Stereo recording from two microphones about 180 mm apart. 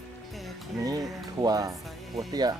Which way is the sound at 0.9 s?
20° right (ahead or behind).